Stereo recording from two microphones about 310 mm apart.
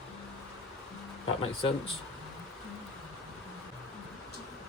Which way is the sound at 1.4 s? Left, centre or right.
Centre.